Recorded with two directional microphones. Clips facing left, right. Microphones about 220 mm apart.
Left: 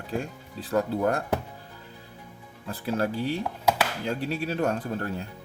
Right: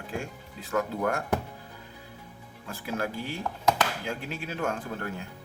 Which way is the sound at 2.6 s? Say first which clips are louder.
Left 5 dB; 35° left (ahead or behind).